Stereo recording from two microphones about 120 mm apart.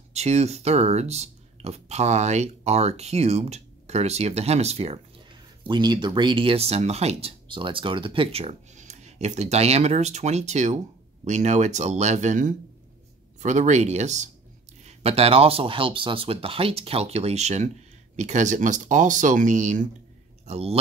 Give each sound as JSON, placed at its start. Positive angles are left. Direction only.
{"t": 0.1, "sound": "speech", "side_deg": -65}
{"t": 5.6, "sound": "speech", "side_deg": -40}
{"t": 14.8, "sound": "speech", "side_deg": -65}
{"t": 18.1, "sound": "speech", "side_deg": -80}
{"t": 20.4, "sound": "speech", "side_deg": -60}